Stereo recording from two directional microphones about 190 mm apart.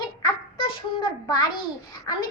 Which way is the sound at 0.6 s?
25° left (ahead or behind).